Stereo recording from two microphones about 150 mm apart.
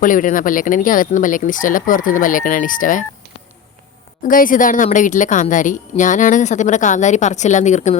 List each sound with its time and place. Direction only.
0.0 s a woman's voice: 65° left (ahead or behind)
4.2 s a woman's voice: 65° left (ahead or behind)